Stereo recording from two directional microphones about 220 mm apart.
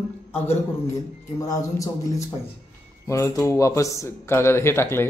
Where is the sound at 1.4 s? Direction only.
15° left (ahead or behind).